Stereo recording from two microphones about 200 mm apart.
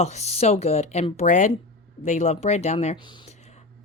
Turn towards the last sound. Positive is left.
turn(degrees=25)  # may be behind; listen again after turning